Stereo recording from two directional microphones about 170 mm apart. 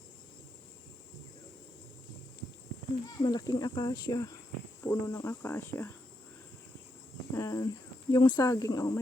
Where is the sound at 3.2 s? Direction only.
25° left (ahead or behind).